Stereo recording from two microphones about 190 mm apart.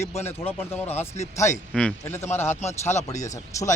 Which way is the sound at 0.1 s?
15° left (ahead or behind).